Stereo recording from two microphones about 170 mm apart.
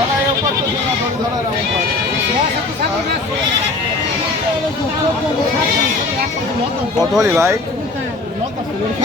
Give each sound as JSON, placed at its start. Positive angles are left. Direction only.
{"t": 7.2, "sound": "speech", "side_deg": -15}